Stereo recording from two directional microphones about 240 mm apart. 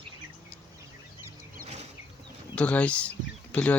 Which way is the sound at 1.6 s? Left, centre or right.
Right.